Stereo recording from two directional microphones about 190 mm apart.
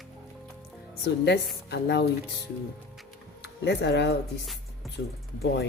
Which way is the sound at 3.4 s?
60° left (ahead or behind).